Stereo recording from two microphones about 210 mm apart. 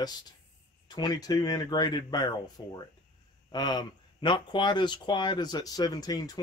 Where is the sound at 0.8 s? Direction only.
20° left (ahead or behind).